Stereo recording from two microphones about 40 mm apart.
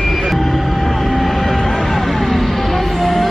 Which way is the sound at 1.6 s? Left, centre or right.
Centre.